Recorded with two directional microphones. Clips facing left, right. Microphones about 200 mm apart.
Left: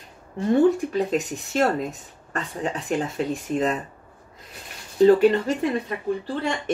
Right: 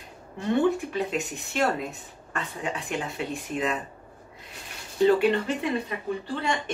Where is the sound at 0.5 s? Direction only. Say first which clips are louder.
Left 5 dB; 40° left (ahead or behind).